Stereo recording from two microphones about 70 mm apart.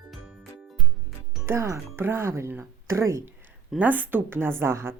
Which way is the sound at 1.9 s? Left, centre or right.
Right.